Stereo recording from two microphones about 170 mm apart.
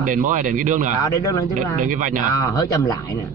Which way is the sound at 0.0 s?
50° right (ahead or behind).